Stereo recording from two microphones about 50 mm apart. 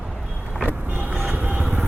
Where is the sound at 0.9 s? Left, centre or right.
Right; by 1.8 s centre.